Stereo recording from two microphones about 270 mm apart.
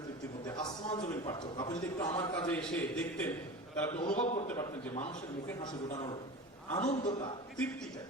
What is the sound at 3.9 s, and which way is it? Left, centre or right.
Speech, left.